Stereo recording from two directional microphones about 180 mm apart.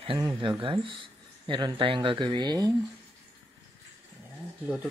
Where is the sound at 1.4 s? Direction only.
25° right (ahead or behind).